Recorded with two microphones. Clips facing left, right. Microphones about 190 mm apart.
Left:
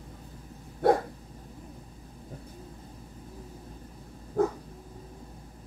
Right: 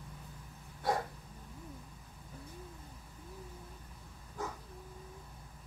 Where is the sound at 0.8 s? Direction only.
60° left (ahead or behind).